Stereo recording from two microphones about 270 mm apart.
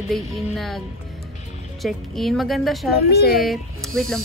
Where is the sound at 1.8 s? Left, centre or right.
Centre.